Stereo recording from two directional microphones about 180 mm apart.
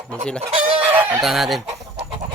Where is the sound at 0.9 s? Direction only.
10° right (ahead or behind).